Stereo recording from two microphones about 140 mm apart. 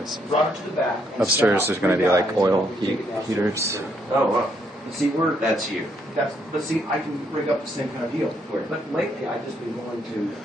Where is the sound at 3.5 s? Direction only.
20° right (ahead or behind).